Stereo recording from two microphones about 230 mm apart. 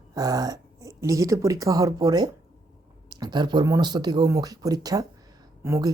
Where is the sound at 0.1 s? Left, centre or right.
Centre.